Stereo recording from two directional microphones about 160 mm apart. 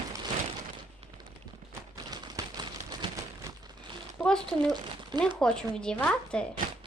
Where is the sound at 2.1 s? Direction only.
25° right (ahead or behind).